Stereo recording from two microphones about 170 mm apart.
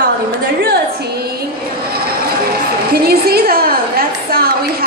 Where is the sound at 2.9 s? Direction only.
65° right (ahead or behind).